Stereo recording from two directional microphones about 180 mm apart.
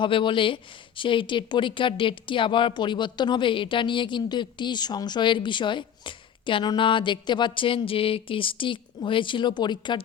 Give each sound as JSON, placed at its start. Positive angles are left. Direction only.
{"t": 0.0, "sound": "speech", "side_deg": 30}